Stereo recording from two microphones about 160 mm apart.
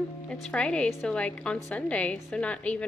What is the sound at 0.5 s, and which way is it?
A woman's voice, 5° left (ahead or behind).